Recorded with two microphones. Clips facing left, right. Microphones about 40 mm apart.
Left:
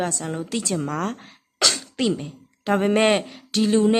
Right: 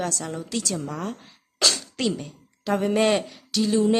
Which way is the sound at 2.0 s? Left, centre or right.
Centre.